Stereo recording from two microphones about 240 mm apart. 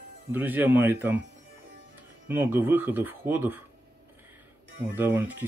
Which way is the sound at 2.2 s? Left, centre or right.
Centre.